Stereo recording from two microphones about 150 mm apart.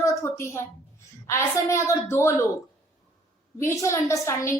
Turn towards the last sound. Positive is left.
turn(degrees=20)  # may be behind; listen again after turning